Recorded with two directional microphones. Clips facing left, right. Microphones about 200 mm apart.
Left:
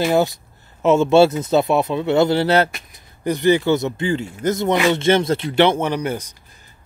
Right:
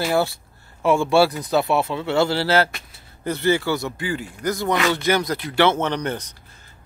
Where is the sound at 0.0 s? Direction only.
20° left (ahead or behind).